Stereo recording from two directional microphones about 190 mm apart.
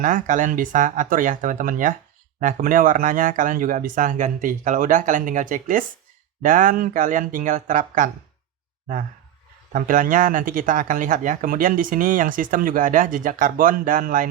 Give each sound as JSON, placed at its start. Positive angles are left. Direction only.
{"t": 0.0, "sound": "speech", "side_deg": -45}
{"t": 9.7, "sound": "speech", "side_deg": -45}